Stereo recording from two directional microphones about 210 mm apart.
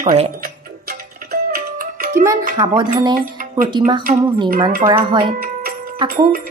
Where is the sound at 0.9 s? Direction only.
45° right (ahead or behind).